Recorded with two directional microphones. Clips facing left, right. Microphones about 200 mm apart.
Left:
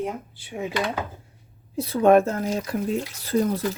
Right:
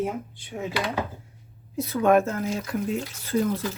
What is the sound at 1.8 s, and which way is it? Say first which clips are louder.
Speech: left 3 dB; 30° left (ahead or behind).